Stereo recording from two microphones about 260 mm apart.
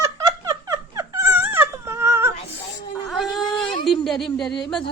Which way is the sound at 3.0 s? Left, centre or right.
Centre.